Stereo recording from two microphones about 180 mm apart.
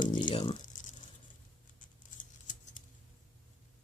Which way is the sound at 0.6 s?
45° left (ahead or behind).